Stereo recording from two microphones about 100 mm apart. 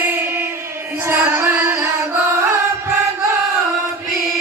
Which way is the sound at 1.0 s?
20° right (ahead or behind).